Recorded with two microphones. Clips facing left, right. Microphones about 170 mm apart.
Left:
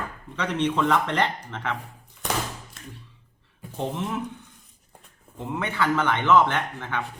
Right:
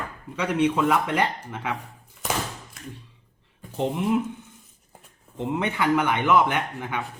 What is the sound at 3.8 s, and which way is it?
Speech, 15° right (ahead or behind).